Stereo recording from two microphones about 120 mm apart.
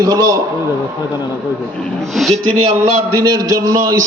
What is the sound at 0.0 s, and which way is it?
Speech, 30° right (ahead or behind).